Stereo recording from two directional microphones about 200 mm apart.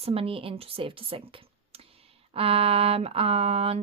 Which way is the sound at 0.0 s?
30° right (ahead or behind).